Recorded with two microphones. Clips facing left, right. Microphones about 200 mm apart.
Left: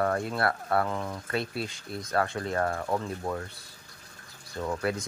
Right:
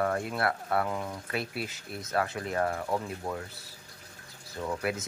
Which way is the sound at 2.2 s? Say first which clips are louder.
Left 3 dB; 35° left (ahead or behind).